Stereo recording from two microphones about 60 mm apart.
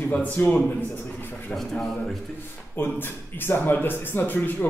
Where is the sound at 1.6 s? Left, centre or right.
Centre.